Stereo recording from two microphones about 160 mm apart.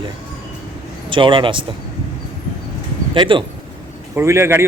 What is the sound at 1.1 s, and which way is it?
Speech, 30° right (ahead or behind).